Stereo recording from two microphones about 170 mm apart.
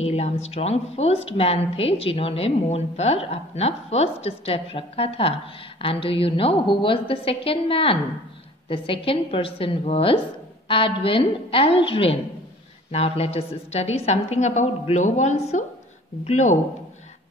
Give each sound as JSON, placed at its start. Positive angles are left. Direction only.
{"t": 0.0, "sound": "a woman's voice", "side_deg": 40}